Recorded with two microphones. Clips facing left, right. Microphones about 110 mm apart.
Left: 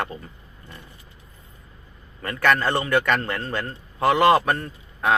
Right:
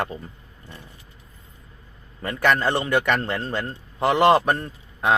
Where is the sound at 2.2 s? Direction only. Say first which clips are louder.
Even; 20° right (ahead or behind).